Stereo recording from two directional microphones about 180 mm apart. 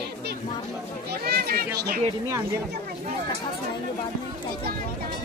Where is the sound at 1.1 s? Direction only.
60° right (ahead or behind).